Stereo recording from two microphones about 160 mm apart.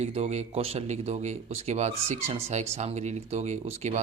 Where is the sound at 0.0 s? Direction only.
45° right (ahead or behind).